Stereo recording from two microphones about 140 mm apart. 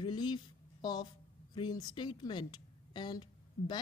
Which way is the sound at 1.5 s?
30° left (ahead or behind).